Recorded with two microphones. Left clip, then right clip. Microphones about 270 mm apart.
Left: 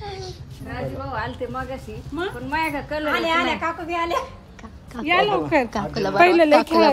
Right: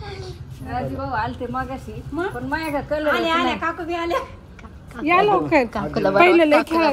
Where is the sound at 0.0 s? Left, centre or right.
Centre.